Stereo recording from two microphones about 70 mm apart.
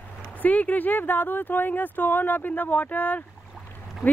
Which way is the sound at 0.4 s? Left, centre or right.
Left.